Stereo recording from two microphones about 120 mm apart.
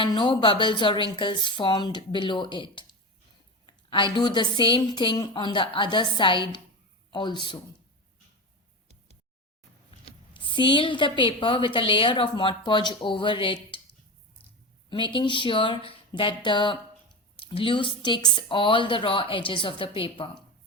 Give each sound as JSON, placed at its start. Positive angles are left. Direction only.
{"t": 0.0, "sound": "a woman's voice", "side_deg": 45}
{"t": 10.1, "sound": "a woman's voice", "side_deg": 45}
{"t": 14.8, "sound": "a woman's voice", "side_deg": 40}